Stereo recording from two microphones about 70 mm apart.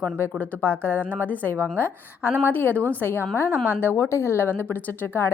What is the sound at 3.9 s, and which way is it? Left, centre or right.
A woman's voice, left.